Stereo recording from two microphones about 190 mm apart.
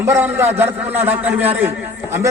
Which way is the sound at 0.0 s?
10° right (ahead or behind).